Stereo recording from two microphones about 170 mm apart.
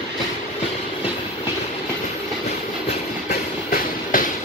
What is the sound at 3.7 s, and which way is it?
Train, 55° left (ahead or behind).